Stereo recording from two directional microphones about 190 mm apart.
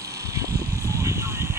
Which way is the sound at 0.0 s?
15° right (ahead or behind).